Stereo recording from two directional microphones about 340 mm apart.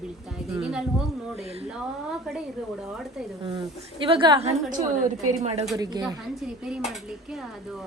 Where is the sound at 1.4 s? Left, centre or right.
Centre.